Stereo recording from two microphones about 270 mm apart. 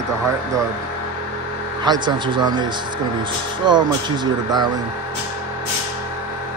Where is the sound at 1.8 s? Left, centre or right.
Centre.